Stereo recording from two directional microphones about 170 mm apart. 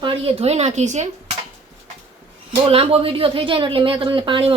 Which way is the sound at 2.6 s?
35° right (ahead or behind).